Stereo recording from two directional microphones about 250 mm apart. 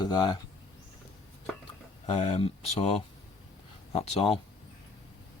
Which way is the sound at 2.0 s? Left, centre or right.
Left.